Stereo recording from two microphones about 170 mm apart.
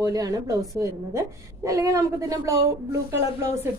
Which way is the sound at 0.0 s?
20° right (ahead or behind).